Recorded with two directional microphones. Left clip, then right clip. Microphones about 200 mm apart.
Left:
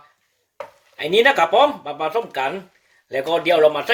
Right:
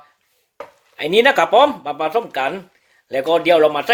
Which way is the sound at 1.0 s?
55° right (ahead or behind).